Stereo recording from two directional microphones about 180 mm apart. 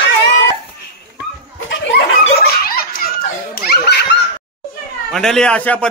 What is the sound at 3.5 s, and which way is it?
Laughter, 65° left (ahead or behind).